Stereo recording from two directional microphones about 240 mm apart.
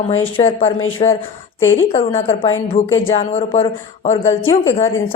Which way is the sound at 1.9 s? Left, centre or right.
Left.